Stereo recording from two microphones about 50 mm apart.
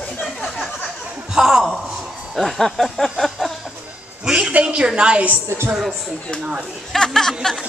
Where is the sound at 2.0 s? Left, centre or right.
Centre.